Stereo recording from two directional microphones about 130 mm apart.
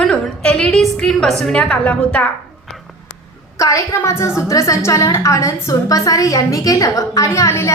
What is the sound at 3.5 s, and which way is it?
A woman's voice, 25° left (ahead or behind).